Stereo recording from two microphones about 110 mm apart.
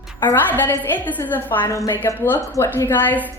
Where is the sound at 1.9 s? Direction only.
20° left (ahead or behind).